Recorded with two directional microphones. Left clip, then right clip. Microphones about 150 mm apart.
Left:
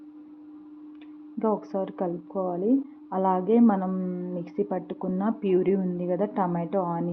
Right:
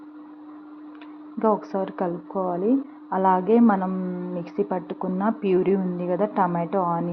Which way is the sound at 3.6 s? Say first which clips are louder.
Right 3 dB; 15° right (ahead or behind).